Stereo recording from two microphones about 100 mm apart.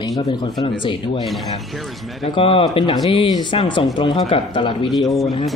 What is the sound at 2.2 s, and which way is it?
Speech, 65° left (ahead or behind).